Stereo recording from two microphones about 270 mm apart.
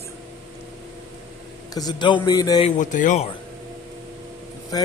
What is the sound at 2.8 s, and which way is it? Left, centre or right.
Speech, left.